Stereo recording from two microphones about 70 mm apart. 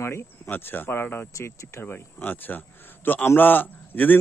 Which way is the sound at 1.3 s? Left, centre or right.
Left.